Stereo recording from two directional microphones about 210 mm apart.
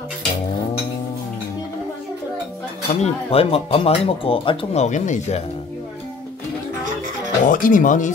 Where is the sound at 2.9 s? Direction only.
30° left (ahead or behind).